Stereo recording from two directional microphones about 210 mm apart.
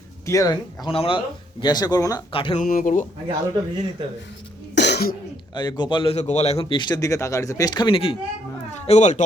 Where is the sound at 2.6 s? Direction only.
40° left (ahead or behind).